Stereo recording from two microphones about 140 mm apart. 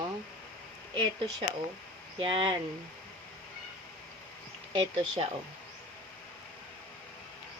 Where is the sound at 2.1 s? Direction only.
35° right (ahead or behind).